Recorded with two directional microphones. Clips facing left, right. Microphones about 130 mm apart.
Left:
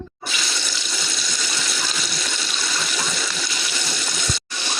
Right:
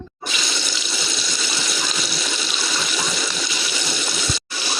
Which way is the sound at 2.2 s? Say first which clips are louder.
Right 2 dB; 10° right (ahead or behind).